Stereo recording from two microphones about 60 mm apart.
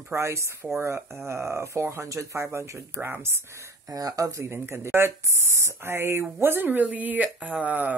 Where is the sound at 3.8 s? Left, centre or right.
Right.